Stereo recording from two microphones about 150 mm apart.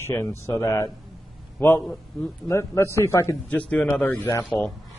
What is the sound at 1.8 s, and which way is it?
Speech, 5° left (ahead or behind).